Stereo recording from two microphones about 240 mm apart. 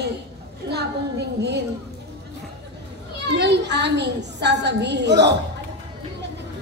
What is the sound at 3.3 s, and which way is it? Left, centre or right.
A man's voice, right.